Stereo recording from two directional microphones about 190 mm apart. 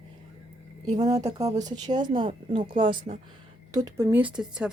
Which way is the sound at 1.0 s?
20° right (ahead or behind).